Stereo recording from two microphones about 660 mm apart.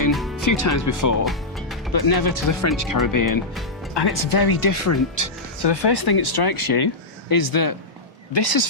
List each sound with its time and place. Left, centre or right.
0.1 s music: centre
0.4 s speech: left
5.6 s speech: left